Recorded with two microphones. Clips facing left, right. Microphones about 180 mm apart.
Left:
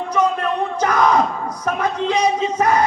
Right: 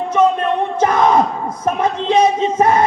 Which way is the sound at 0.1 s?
25° right (ahead or behind).